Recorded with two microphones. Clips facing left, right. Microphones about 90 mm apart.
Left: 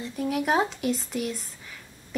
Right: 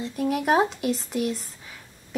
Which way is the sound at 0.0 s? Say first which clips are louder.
Right 2 dB; centre (ahead or behind).